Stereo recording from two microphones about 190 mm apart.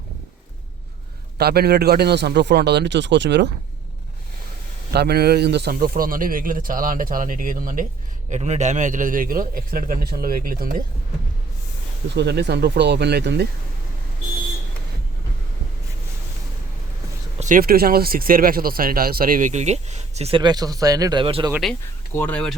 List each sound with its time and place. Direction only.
1.4 s a man's voice: 55° right (ahead or behind)
4.9 s speech: 55° right (ahead or behind)
12.1 s a man's voice: 60° right (ahead or behind)
17.4 s speech: 50° right (ahead or behind); by 21.5 s 25° right (ahead or behind)
21.5 s speech: centre (ahead or behind)